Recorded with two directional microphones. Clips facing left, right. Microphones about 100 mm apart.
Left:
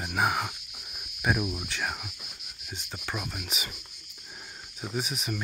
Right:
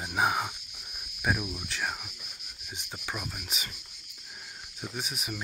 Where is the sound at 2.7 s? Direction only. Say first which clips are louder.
Left 2 dB; 10° right (ahead or behind).